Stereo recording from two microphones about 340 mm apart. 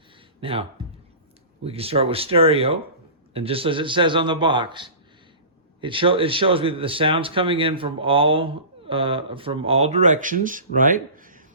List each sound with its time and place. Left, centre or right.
0.4 s speech: centre
1.6 s speech: centre